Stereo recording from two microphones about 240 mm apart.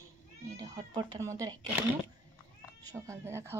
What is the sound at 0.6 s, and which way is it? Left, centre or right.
Speech, centre.